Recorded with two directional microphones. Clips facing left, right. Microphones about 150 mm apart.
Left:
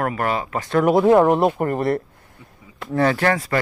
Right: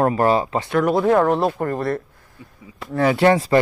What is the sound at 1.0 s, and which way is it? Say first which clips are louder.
Speech: left 3 dB; 15° left (ahead or behind).